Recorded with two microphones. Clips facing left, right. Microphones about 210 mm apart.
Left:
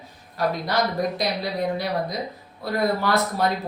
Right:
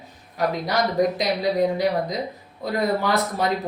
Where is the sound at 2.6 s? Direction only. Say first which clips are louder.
Right 1 dB; 15° right (ahead or behind).